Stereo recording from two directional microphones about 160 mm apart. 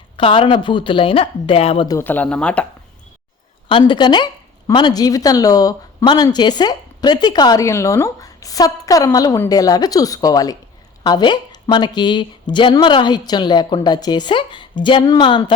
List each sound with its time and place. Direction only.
0.2 s speech: 30° left (ahead or behind)
1.9 s speech: 15° left (ahead or behind)
3.7 s speech: 30° left (ahead or behind)